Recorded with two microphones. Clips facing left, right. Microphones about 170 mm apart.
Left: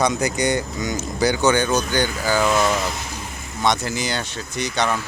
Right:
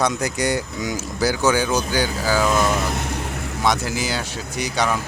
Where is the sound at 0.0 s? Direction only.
Centre (ahead or behind).